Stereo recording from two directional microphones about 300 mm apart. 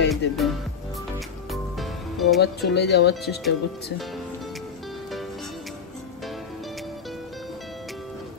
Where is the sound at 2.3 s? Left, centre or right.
Left.